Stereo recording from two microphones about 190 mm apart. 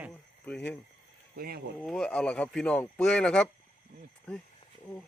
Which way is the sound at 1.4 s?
55° right (ahead or behind).